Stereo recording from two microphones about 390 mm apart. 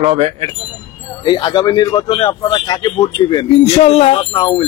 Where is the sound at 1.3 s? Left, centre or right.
Centre.